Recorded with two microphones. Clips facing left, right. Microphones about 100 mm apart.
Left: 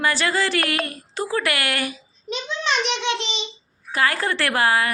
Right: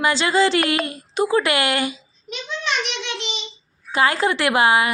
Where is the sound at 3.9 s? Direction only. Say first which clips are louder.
Right 3 dB; 20° right (ahead or behind).